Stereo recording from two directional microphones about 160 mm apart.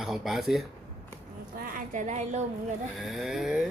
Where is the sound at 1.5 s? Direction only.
60° right (ahead or behind).